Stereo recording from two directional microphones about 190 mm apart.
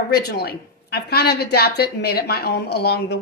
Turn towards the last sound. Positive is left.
turn(degrees=60)  # may be behind; listen again after turning